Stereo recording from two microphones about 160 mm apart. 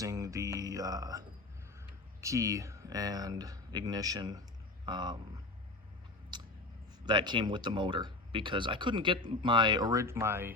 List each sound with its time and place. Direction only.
0.0 s music: 20° right (ahead or behind)
2.2 s speech: 20° right (ahead or behind)
6.3 s a sound: 25° right (ahead or behind)
7.0 s speech: 30° right (ahead or behind)